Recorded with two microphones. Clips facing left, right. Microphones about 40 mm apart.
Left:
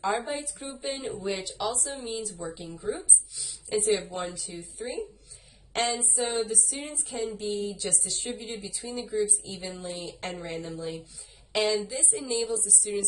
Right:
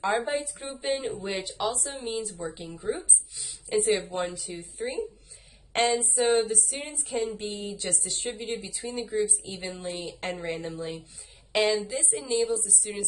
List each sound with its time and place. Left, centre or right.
0.1 s a woman's voice: right
4.0 s a woman's voice: right
5.7 s a woman's voice: right
12.9 s a sound: centre